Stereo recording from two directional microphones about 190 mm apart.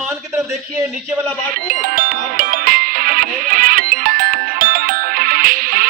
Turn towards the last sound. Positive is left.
turn(degrees=-50)  # may be behind; listen again after turning